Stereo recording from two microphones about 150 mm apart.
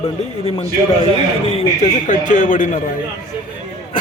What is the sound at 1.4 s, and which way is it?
A man's voice, 45° left (ahead or behind).